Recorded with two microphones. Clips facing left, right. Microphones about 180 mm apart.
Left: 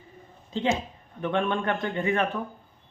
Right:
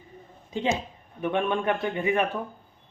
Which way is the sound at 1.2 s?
10° right (ahead or behind).